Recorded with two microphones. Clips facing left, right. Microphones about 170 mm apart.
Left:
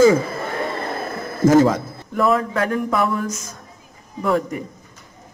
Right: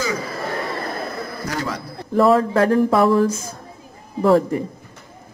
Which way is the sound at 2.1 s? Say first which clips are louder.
Right 4 dB; 30° right (ahead or behind).